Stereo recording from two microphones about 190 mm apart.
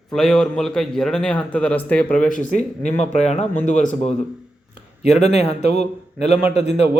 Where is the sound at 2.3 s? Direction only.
40° left (ahead or behind).